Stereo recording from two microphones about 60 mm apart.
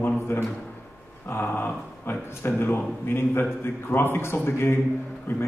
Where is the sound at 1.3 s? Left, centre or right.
Left.